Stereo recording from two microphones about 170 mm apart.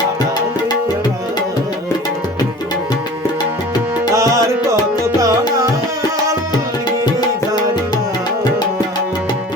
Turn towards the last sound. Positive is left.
turn(degrees=25)  # may be behind; listen again after turning